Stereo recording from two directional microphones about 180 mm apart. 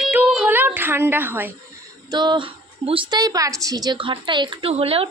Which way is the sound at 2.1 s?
25° right (ahead or behind).